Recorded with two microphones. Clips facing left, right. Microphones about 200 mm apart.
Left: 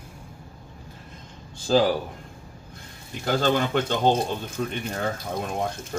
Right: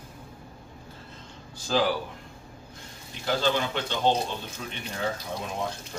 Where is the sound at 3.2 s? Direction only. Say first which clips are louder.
Left 3 dB; 50° left (ahead or behind).